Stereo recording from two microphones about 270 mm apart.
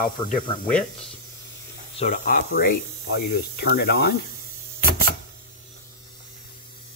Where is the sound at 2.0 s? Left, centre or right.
Left.